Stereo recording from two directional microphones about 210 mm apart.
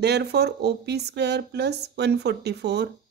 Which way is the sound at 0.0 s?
50° right (ahead or behind).